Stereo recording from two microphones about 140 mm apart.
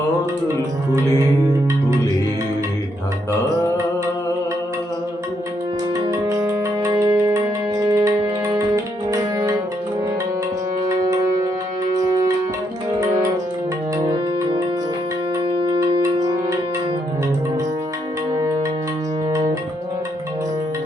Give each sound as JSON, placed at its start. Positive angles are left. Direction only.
{"t": 6.1, "sound": "music", "side_deg": -25}
{"t": 10.8, "sound": "music", "side_deg": -25}
{"t": 15.4, "sound": "music", "side_deg": -40}
{"t": 16.0, "sound": "music", "side_deg": -25}